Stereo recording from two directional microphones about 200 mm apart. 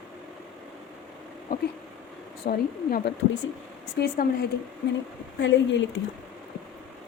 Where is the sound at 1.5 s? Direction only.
45° left (ahead or behind).